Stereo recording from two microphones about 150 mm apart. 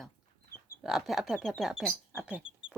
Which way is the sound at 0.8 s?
Centre (ahead or behind).